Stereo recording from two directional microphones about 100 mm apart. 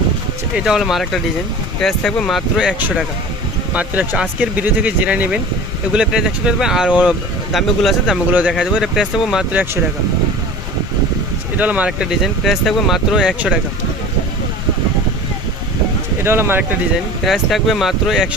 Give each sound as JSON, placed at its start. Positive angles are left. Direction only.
{"t": 0.5, "sound": "speech", "side_deg": -5}
{"t": 2.6, "sound": "speech", "side_deg": -10}
{"t": 8.3, "sound": "speech", "side_deg": -15}
{"t": 8.5, "sound": "speech", "side_deg": -5}
{"t": 11.5, "sound": "speech", "side_deg": -15}
{"t": 16.2, "sound": "speech", "side_deg": -25}
{"t": 17.2, "sound": "speech", "side_deg": 0}